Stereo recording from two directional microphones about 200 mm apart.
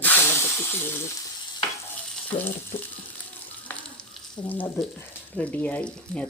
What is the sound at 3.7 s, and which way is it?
Frying, 5° left (ahead or behind).